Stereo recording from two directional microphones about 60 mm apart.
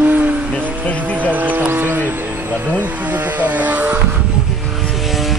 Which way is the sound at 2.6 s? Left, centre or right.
Right.